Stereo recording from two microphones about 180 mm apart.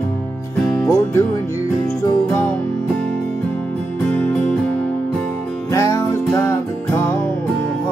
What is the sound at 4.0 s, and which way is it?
Music, 5° left (ahead or behind).